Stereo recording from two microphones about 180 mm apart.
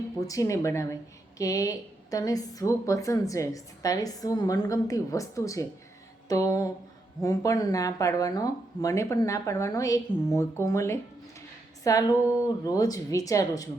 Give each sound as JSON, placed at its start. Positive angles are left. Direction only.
{"t": 0.2, "sound": "a woman's voice", "side_deg": 20}
{"t": 6.2, "sound": "a sound", "side_deg": 20}
{"t": 7.2, "sound": "a woman's voice", "side_deg": 20}